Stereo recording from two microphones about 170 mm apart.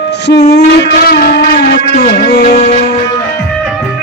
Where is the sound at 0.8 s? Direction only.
60° left (ahead or behind).